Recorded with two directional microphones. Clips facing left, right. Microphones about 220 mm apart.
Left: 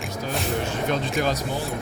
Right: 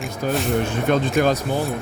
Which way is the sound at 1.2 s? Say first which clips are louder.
Right 6 dB; 55° right (ahead or behind).